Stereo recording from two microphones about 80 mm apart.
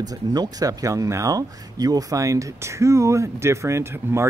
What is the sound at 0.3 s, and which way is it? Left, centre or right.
Speech, right.